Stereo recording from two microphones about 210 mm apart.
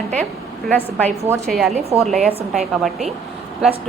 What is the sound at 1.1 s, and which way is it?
Speech, 15° right (ahead or behind).